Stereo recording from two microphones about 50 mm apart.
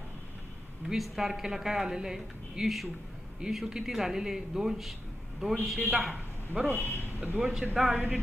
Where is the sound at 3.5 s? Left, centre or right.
Centre.